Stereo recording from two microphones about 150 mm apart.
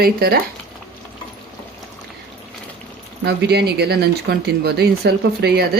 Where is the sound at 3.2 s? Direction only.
90° right.